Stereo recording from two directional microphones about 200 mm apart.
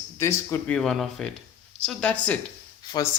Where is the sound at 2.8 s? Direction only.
20° left (ahead or behind).